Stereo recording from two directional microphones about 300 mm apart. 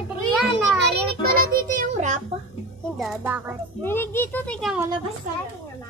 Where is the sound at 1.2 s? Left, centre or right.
Right.